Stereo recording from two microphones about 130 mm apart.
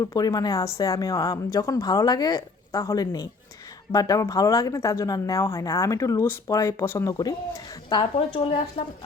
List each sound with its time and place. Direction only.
0.0 s speech: 25° left (ahead or behind)